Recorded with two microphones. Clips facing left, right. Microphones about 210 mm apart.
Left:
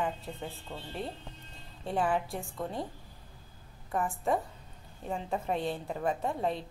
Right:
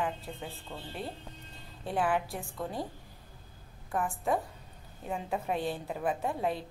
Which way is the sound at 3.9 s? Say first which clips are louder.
Left 1 dB; centre (ahead or behind).